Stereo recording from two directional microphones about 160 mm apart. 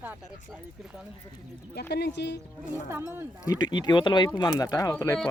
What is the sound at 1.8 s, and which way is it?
Speech, 90° left.